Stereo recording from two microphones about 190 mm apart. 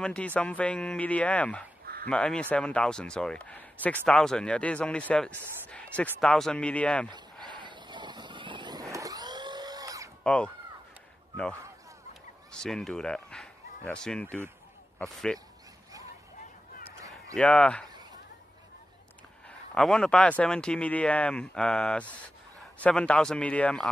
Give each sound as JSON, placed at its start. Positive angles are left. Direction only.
{"t": 0.0, "sound": "speech", "side_deg": 5}
{"t": 5.7, "sound": "a sound", "side_deg": 5}
{"t": 6.2, "sound": "speech", "side_deg": 5}
{"t": 7.4, "sound": "vehicle", "side_deg": -25}
{"t": 10.2, "sound": "speech", "side_deg": 5}
{"t": 12.5, "sound": "speech", "side_deg": 5}
{"t": 17.4, "sound": "speech", "side_deg": 5}
{"t": 19.7, "sound": "speech", "side_deg": 5}